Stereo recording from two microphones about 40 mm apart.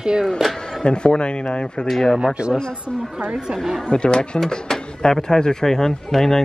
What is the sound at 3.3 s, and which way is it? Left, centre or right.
Speech, centre.